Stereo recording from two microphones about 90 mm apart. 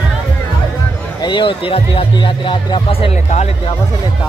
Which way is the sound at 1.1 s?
60° left (ahead or behind).